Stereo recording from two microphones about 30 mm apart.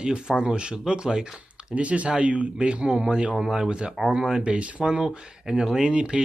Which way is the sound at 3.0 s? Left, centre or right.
Right.